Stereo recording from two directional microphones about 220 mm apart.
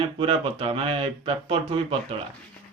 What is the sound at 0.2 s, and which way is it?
Speech, 25° right (ahead or behind).